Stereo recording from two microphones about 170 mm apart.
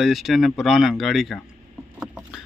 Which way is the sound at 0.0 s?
Centre (ahead or behind).